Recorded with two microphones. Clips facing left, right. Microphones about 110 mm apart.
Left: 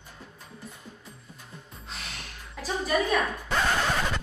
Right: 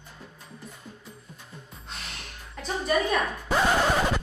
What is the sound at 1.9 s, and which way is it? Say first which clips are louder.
Gasp: even; centre (ahead or behind).